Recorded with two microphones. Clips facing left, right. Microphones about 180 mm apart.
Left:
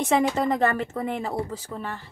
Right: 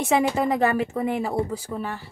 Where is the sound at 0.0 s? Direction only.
5° right (ahead or behind).